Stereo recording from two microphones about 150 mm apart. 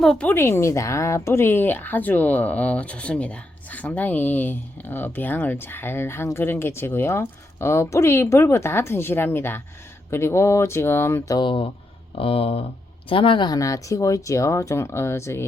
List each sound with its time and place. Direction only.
0.0 s speech: 5° left (ahead or behind)
11.3 s speech: 35° left (ahead or behind); by 15.4 s 20° left (ahead or behind)